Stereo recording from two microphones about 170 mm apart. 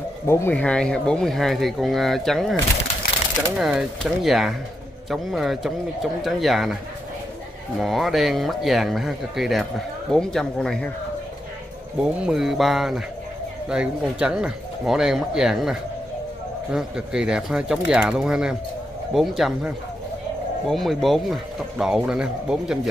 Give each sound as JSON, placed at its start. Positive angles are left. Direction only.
{"t": 0.3, "sound": "speech", "side_deg": 10}
{"t": 3.0, "sound": "a sound", "side_deg": 60}
{"t": 3.5, "sound": "speech", "side_deg": 0}
{"t": 7.8, "sound": "speech", "side_deg": 0}
{"t": 12.0, "sound": "speech", "side_deg": 0}